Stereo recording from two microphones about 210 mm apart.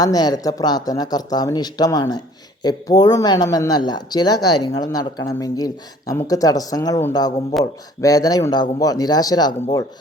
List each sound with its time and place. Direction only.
0.0 s speech: 20° left (ahead or behind)